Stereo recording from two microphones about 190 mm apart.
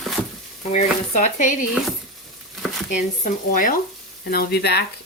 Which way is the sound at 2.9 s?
40° left (ahead or behind).